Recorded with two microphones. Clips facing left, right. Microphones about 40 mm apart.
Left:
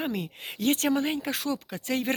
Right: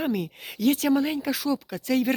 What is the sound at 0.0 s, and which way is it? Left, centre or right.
Speech, left.